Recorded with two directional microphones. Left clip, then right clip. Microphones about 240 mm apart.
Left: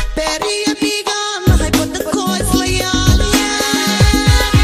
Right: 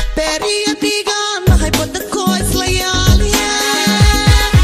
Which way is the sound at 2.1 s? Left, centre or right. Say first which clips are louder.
Right 1 dB; left.